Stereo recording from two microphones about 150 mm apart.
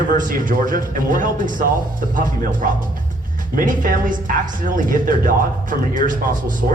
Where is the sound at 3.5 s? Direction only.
65° right (ahead or behind).